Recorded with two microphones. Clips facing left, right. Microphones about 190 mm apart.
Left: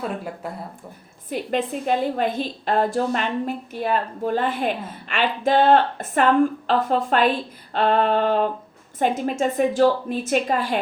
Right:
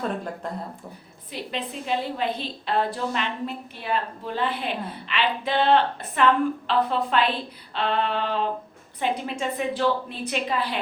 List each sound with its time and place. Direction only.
0.4 s speech: 10° left (ahead or behind)
1.3 s a woman's voice: 50° left (ahead or behind)